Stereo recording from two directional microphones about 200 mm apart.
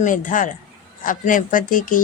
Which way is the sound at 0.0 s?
40° left (ahead or behind).